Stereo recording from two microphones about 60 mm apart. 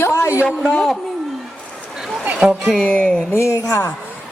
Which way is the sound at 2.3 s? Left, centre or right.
Centre.